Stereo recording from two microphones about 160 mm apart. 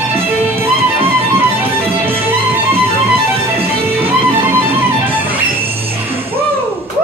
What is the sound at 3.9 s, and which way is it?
Music, 15° right (ahead or behind).